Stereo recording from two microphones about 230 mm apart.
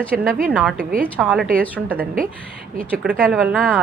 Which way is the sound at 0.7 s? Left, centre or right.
Right.